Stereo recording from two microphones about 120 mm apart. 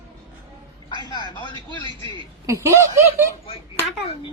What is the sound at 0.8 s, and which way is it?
A man's voice, 35° left (ahead or behind).